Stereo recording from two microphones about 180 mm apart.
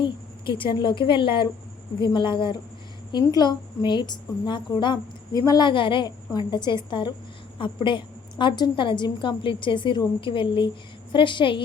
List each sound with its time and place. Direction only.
0.0 s a woman's voice: 30° left (ahead or behind)